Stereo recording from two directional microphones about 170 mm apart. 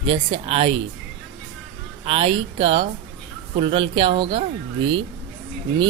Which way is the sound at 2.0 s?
35° right (ahead or behind).